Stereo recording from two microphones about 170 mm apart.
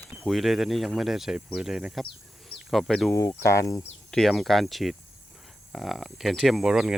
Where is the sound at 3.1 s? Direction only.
15° left (ahead or behind).